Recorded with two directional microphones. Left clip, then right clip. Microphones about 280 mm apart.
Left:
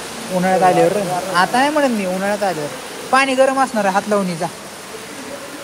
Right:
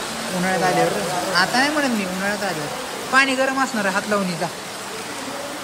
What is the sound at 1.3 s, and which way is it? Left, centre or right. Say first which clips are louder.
Speech: left 4 dB; centre.